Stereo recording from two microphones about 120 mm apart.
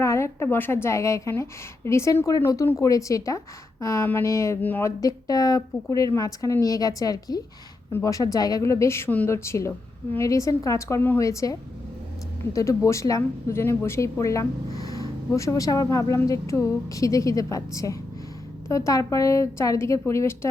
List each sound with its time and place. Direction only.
0.0 s speech: 25° left (ahead or behind)
12.5 s speech: 25° left (ahead or behind)